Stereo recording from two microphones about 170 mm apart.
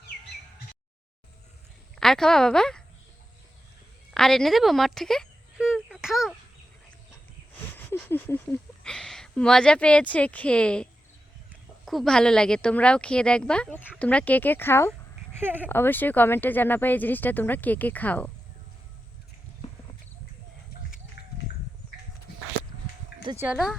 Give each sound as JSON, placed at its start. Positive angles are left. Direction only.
{"t": 2.0, "sound": "a woman's voice", "side_deg": 5}
{"t": 4.1, "sound": "a sound", "side_deg": 5}
{"t": 7.9, "sound": "speech", "side_deg": 10}
{"t": 11.9, "sound": "speech", "side_deg": 0}
{"t": 15.3, "sound": "speech", "side_deg": -10}
{"t": 15.7, "sound": "speech", "side_deg": 10}
{"t": 21.2, "sound": "a sound", "side_deg": 70}
{"t": 23.3, "sound": "speech", "side_deg": -15}